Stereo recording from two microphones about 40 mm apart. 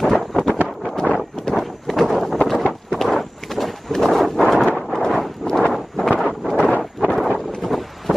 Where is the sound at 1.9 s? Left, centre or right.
Centre.